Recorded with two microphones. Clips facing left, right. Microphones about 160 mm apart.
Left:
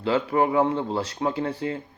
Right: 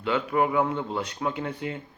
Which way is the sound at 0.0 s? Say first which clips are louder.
Left 3 dB; 30° left (ahead or behind).